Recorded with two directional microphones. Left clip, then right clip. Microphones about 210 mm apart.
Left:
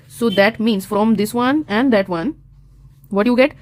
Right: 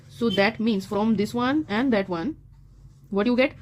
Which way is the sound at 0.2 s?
30° left (ahead or behind).